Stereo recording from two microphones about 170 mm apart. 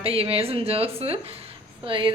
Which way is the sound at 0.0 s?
35° right (ahead or behind).